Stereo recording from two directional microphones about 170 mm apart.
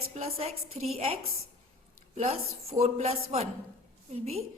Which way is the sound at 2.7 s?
40° right (ahead or behind).